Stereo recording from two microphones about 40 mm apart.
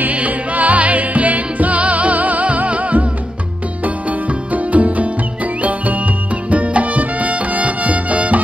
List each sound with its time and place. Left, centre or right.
0.0 s music: right
4.5 s music: right